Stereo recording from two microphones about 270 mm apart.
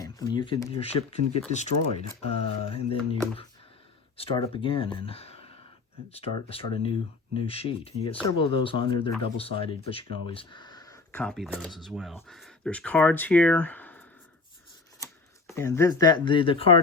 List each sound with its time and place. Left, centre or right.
0.0 s speech: centre
15.4 s speech: centre